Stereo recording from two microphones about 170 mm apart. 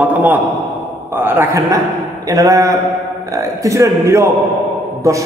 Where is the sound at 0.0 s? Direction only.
10° right (ahead or behind).